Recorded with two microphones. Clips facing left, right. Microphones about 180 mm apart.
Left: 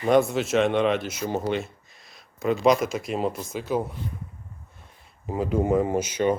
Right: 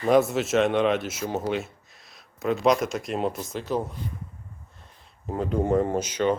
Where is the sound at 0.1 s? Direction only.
Centre (ahead or behind).